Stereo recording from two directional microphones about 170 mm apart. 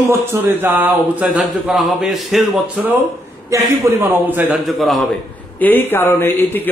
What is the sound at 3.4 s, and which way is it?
A man's voice, 15° right (ahead or behind).